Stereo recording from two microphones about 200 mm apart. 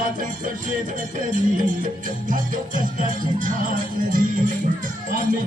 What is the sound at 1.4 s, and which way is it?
Music, 40° right (ahead or behind).